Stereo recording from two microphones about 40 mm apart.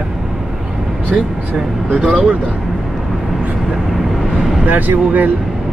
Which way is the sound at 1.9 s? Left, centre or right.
Right.